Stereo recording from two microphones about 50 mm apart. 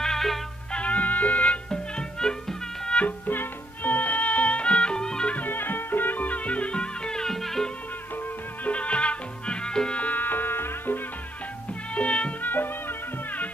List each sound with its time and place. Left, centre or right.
0.0 s music: centre
0.7 s music: left
1.7 s music: centre
3.3 s music: left; by 5.3 s centre
5.3 s music: left; by 7.7 s centre
8.6 s music: left
10.0 s music: left
11.9 s music: left
12.4 s music: left